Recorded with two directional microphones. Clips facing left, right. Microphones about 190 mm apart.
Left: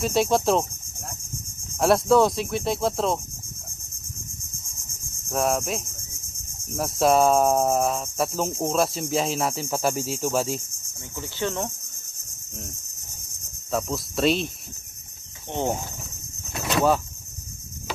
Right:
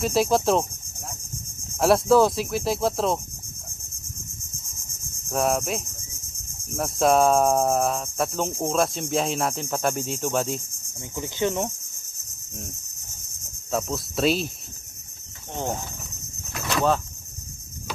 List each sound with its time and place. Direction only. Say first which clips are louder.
0.0 s speech: even; centre (ahead or behind)
1.8 s speech: right 1 dB; centre (ahead or behind)
5.3 s speech: even; centre (ahead or behind)
11.1 s insect: right 3 dB; 15° right (ahead or behind)
13.7 s speech: even; centre (ahead or behind)
15.5 s speech: left 3 dB; 15° left (ahead or behind)